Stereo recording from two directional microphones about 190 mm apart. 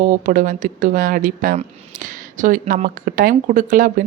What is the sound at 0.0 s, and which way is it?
A woman's voice, 40° right (ahead or behind).